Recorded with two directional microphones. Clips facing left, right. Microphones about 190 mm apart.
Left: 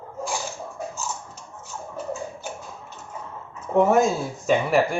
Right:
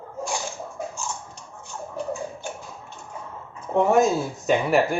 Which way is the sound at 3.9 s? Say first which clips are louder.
Right 1 dB; centre (ahead or behind).